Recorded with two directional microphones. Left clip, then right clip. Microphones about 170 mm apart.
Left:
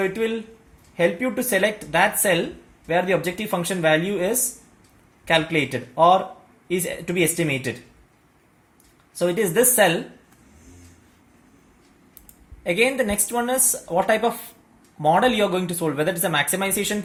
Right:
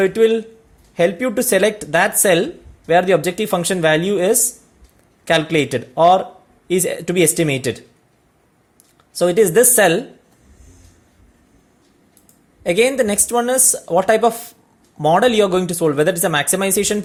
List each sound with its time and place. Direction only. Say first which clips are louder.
0.0 s speech: right 10 dB; 70° right (ahead or behind)
9.1 s speech: right 7 dB; 65° right (ahead or behind)
12.6 s speech: right 5 dB; 60° right (ahead or behind)